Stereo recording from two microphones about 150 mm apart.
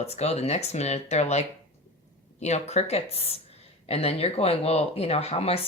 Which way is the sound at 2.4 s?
45° left (ahead or behind).